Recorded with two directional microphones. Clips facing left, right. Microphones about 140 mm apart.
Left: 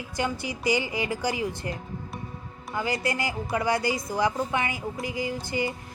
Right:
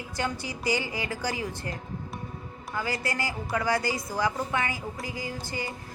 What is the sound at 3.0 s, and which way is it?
A woman's voice, 20° left (ahead or behind).